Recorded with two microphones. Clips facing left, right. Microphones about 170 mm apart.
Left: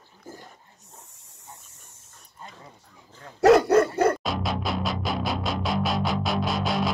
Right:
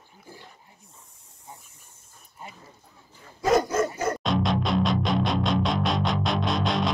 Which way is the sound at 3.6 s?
65° left (ahead or behind).